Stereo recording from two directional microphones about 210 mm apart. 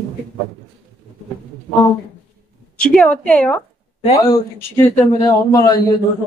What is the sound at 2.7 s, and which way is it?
A woman's voice, 5° left (ahead or behind).